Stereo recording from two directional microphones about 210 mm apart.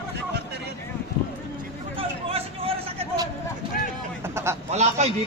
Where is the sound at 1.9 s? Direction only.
25° right (ahead or behind).